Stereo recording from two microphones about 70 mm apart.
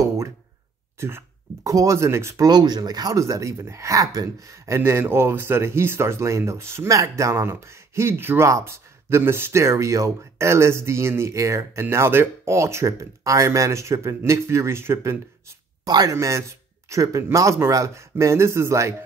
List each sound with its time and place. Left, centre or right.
0.9 s speech: right
1.6 s speech: right
2.4 s speech: right
4.7 s speech: right
15.8 s speech: right
16.2 s speech: right